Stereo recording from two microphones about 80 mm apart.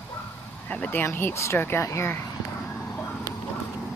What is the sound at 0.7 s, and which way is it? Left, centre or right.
Speech, left.